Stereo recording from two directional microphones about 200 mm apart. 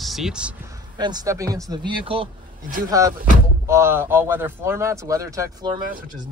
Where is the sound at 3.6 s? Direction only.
10° right (ahead or behind).